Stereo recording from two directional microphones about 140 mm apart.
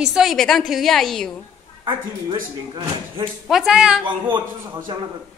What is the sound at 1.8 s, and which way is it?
Speech, 35° right (ahead or behind).